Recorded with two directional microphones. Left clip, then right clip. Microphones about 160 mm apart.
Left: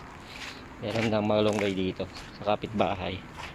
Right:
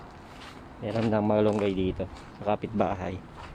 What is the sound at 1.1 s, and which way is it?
Speech, 25° right (ahead or behind).